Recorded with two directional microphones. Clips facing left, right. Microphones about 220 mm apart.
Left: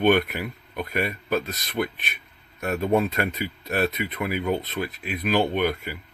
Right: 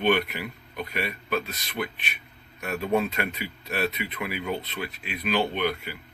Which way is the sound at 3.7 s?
45° left (ahead or behind).